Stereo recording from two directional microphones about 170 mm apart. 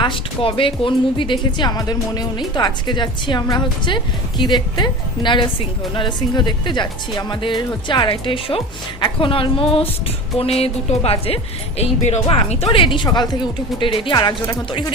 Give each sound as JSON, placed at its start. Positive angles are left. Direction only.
{"t": 0.0, "sound": "speech", "side_deg": 30}